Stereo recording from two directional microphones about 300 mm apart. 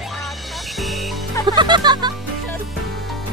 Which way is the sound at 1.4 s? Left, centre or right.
Centre.